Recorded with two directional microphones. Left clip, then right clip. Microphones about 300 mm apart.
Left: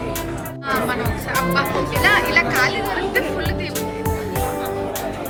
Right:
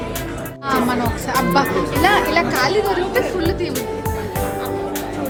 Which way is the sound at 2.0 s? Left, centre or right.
Centre.